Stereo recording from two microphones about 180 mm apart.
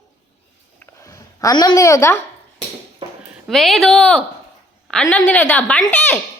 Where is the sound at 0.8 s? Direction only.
20° left (ahead or behind).